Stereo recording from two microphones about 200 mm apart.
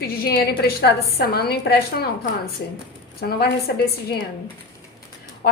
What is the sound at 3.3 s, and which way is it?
Speech, 50° left (ahead or behind).